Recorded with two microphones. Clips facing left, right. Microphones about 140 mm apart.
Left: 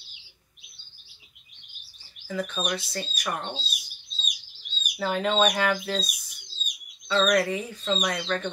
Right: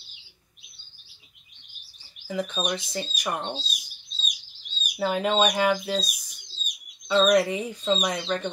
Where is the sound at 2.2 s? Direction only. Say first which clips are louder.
Right 1 dB; 15° right (ahead or behind).